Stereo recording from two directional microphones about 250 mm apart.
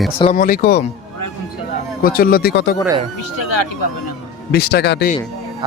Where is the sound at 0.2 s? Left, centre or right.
Left.